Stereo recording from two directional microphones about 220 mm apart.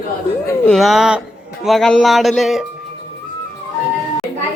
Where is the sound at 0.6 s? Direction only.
Centre (ahead or behind).